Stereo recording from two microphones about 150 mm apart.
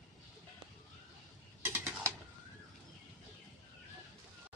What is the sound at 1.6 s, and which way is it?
Mechanisms, 15° right (ahead or behind).